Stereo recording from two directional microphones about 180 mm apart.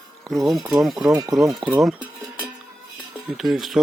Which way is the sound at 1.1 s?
20° right (ahead or behind).